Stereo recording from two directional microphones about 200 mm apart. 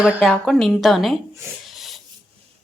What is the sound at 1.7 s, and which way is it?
Filing, centre (ahead or behind).